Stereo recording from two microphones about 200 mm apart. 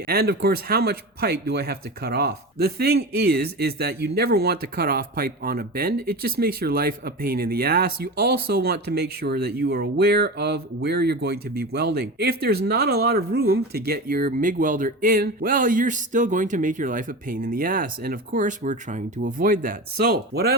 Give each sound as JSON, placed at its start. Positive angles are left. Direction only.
{"t": 0.1, "sound": "speech", "side_deg": -50}